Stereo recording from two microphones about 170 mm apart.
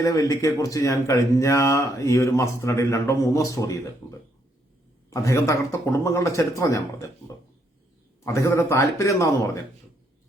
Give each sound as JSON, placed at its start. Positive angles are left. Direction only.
{"t": 0.0, "sound": "speech", "side_deg": 20}
{"t": 5.1, "sound": "a man's voice", "side_deg": 15}
{"t": 8.2, "sound": "a man's voice", "side_deg": 15}